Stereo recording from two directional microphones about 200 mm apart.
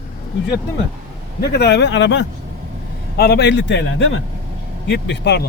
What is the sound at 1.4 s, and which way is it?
A man's voice, 55° left (ahead or behind).